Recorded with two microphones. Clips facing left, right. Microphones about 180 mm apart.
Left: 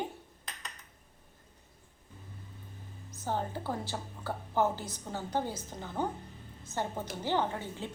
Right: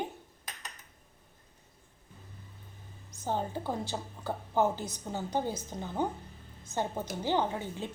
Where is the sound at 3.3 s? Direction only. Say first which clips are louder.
Right 1 dB; 15° right (ahead or behind).